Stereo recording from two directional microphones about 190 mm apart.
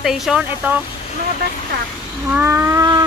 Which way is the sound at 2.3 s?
10° right (ahead or behind).